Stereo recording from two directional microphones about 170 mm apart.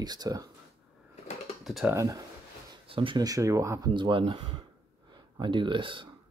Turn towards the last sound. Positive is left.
turn(degrees=-30)  # may be behind; listen again after turning